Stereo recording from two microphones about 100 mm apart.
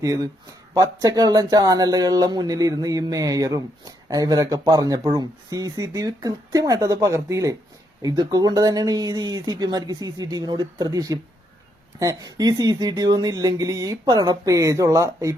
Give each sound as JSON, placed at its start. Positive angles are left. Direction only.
{"t": 0.0, "sound": "speech", "side_deg": -35}